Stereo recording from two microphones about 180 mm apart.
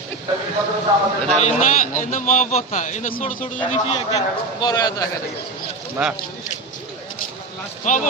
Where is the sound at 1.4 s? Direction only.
40° left (ahead or behind).